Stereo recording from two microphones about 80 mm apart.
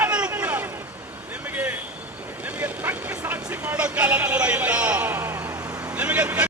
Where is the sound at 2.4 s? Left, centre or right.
Centre.